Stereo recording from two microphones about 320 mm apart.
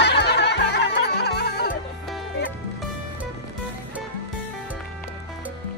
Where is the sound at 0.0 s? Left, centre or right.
Left.